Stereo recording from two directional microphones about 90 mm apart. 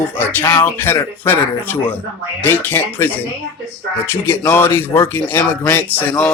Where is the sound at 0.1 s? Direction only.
25° left (ahead or behind).